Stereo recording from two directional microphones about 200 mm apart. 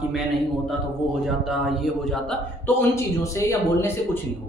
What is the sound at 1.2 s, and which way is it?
A man's voice, centre (ahead or behind).